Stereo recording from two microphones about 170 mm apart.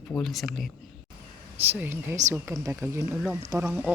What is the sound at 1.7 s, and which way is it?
A woman's voice, 15° right (ahead or behind).